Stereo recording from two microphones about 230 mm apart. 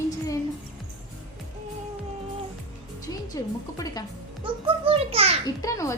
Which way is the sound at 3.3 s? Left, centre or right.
Centre.